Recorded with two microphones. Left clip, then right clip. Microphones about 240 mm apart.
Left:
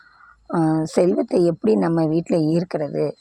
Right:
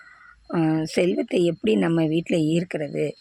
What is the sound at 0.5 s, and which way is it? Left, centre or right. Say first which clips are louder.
Speech: left 3 dB; centre.